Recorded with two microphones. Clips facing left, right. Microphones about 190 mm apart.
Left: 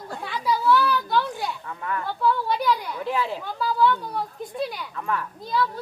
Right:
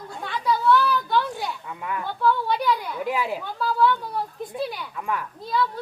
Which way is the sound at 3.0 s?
10° right (ahead or behind).